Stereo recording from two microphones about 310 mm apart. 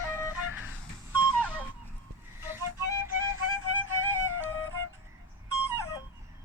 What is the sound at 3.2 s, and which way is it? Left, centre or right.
Music, right.